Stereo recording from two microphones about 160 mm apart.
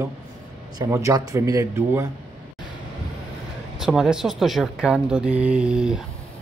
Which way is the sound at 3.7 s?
Centre (ahead or behind).